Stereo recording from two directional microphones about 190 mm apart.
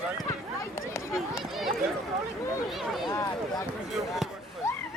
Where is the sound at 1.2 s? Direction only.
Centre (ahead or behind).